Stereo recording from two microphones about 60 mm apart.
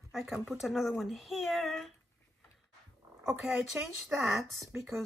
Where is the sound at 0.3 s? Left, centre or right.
Centre.